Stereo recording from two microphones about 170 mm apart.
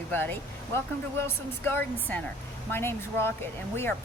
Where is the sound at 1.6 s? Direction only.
10° left (ahead or behind).